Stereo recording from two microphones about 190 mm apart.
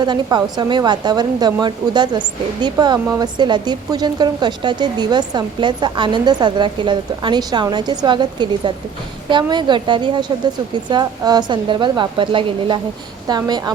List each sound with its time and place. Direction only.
0.0 s a woman's voice: 20° right (ahead or behind)